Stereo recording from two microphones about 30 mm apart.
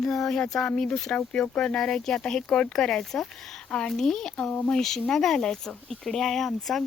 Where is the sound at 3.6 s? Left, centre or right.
Left.